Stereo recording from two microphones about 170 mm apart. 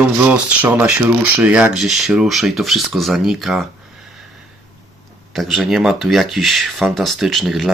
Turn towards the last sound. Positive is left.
turn(degrees=0)  # may be behind; listen again after turning